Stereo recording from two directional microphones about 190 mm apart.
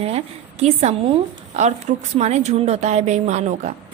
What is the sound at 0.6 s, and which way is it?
A woman's voice, 35° right (ahead or behind).